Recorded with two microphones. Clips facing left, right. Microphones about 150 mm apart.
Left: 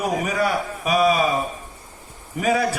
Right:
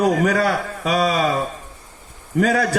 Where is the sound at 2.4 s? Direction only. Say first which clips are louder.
Right 2 dB; 85° right.